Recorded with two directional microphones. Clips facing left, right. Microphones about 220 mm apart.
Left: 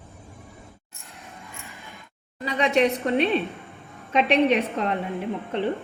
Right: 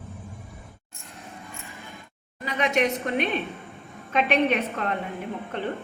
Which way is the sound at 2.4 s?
30° left (ahead or behind).